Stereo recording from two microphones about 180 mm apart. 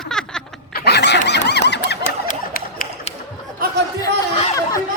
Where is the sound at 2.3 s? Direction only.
50° left (ahead or behind).